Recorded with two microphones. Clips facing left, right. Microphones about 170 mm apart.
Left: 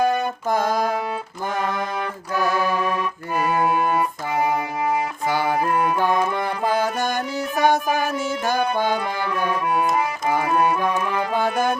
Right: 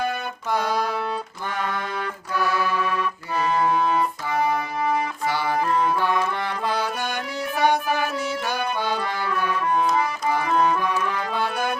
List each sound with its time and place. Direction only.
0.0 s music: 45° left (ahead or behind)
2.3 s organ: 45° left (ahead or behind)
3.3 s music: 10° left (ahead or behind)
5.3 s music: 50° left (ahead or behind)
9.6 s music: 15° left (ahead or behind)
11.3 s music: 50° left (ahead or behind)